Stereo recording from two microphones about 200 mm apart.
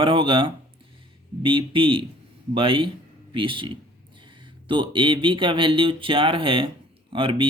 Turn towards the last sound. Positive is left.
turn(degrees=-25)  # may be behind; listen again after turning